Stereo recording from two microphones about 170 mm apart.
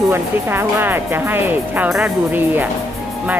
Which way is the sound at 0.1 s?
15° right (ahead or behind).